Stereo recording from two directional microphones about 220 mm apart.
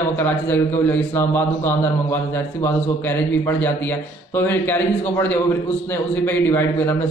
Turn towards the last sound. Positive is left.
turn(degrees=10)  # may be behind; listen again after turning